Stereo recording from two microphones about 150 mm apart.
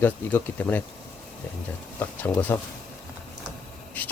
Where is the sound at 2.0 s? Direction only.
10° left (ahead or behind).